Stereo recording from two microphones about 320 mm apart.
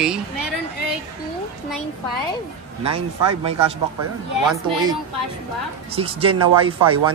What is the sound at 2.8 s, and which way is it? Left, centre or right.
Speech, centre.